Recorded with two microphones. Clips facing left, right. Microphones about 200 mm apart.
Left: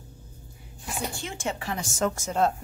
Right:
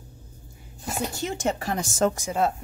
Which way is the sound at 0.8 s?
40° right (ahead or behind).